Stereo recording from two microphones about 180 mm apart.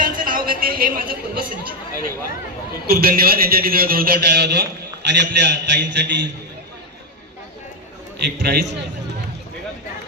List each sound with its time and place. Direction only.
0.0 s a man's voice: 50° right (ahead or behind)
5.0 s a man's voice: 75° right (ahead or behind)
8.4 s a man's voice: 70° right (ahead or behind)